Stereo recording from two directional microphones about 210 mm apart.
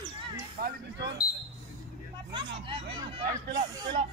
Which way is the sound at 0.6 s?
45° right (ahead or behind).